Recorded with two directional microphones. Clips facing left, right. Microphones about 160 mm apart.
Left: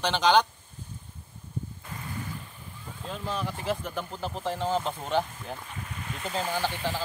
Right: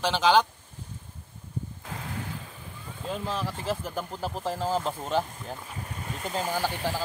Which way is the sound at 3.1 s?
Centre (ahead or behind).